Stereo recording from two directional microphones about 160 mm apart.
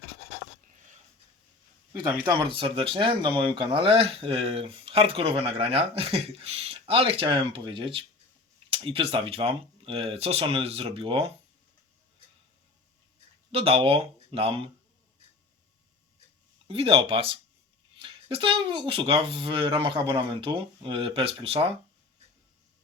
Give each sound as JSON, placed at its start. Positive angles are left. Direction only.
{"t": 1.9, "sound": "speech", "side_deg": -25}
{"t": 13.5, "sound": "speech", "side_deg": -40}
{"t": 16.6, "sound": "speech", "side_deg": -35}